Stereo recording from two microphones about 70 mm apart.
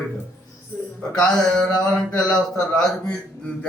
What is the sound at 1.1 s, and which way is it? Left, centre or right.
Speech, centre.